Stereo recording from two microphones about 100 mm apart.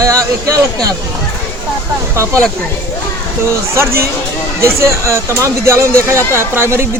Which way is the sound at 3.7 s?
25° right (ahead or behind).